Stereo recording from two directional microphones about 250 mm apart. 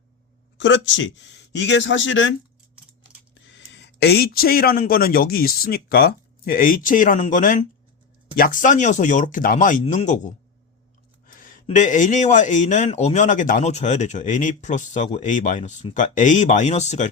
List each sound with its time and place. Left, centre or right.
0.6 s speech: left
3.4 s a man's voice: left